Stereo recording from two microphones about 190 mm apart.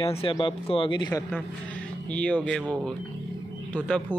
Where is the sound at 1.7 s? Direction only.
5° left (ahead or behind).